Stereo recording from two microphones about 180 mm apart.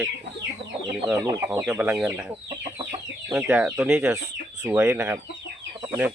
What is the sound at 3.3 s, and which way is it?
Speech, 10° right (ahead or behind).